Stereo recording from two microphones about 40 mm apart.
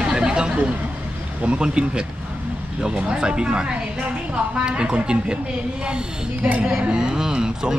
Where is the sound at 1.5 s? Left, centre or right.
Right.